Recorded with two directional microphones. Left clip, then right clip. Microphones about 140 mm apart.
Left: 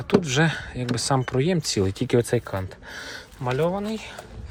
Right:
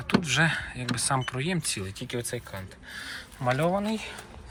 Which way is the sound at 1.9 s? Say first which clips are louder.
Left 12 dB; 60° left (ahead or behind).